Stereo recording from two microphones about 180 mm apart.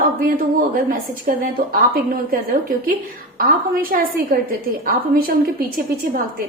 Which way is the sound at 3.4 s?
50° right (ahead or behind).